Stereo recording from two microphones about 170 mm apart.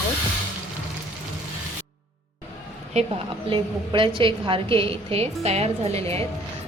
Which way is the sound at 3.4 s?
30° right (ahead or behind).